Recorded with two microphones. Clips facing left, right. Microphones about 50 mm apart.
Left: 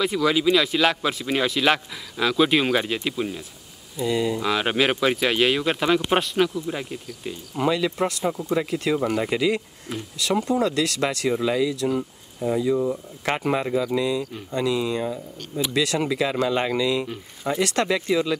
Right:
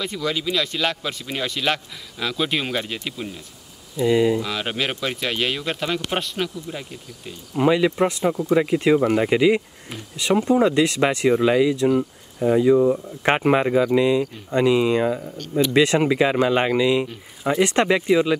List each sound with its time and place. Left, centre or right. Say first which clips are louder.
0.0 s speech: left 5 dB; centre
4.0 s speech: right 5 dB; centre
4.4 s speech: left 4 dB; centre
7.5 s speech: right 5 dB; centre
8.2 s speech: right 4 dB; centre
8.5 s speech: right 7 dB; right
13.2 s speech: right 5 dB; right